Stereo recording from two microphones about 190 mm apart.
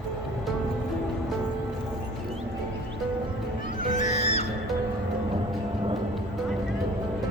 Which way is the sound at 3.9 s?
40° left (ahead or behind).